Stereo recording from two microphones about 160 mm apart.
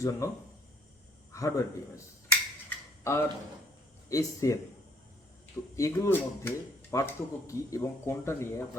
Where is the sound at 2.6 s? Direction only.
15° left (ahead or behind).